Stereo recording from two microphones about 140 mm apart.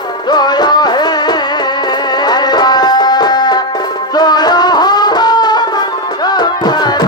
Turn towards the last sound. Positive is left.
turn(degrees=30)  # may be behind; listen again after turning